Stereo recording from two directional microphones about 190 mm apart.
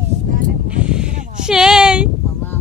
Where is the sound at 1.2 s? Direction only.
40° right (ahead or behind).